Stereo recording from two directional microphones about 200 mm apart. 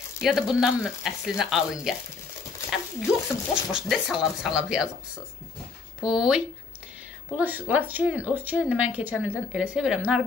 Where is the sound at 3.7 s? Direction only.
Centre (ahead or behind).